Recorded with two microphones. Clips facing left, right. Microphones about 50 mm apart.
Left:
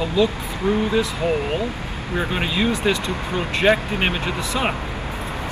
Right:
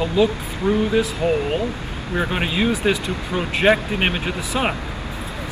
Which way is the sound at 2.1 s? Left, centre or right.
Centre.